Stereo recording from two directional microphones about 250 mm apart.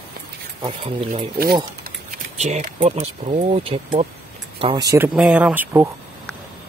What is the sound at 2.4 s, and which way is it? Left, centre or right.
Speech, right.